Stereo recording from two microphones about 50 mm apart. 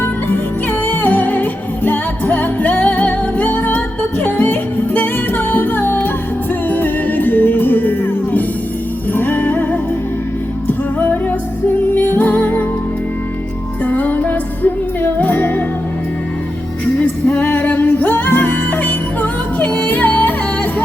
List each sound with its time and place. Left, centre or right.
0.9 s music: left
10.7 s music: left
13.8 s music: left
17.0 s music: left
17.4 s music: left